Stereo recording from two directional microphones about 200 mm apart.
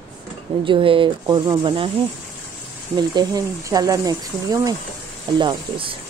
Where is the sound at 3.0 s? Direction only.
20° right (ahead or behind).